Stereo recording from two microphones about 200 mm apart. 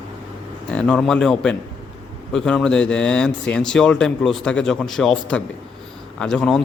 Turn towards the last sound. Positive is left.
turn(degrees=5)  # may be behind; listen again after turning